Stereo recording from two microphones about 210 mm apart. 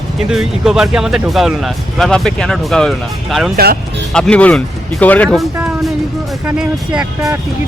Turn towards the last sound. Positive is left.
turn(degrees=-5)  # may be behind; listen again after turning